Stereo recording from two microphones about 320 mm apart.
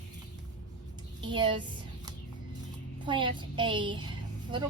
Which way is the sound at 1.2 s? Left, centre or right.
Centre.